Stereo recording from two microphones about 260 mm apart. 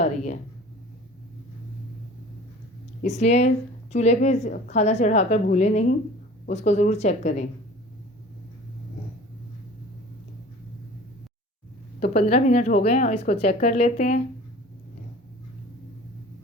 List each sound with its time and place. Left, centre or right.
0.0 s speech: left
3.0 s speech: left
11.9 s speech: left